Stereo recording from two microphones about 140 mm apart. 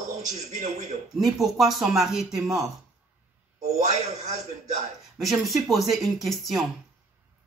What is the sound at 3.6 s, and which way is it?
A man's voice, 55° right (ahead or behind).